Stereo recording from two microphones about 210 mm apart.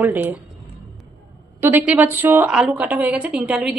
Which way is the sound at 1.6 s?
10° right (ahead or behind).